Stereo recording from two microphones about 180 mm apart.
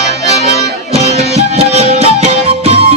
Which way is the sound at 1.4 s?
35° right (ahead or behind).